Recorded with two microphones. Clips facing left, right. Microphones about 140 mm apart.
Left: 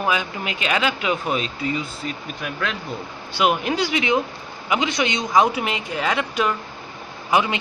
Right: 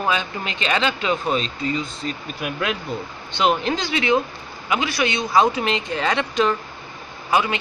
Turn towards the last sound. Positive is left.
turn(degrees=20)  # may be behind; listen again after turning